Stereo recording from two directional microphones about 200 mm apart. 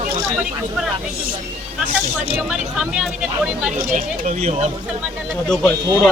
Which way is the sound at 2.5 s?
5° right (ahead or behind).